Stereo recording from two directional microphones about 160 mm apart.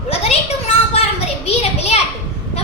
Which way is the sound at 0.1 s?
40° left (ahead or behind).